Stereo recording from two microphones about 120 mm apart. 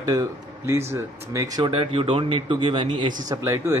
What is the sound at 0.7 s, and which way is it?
Speech, 20° right (ahead or behind).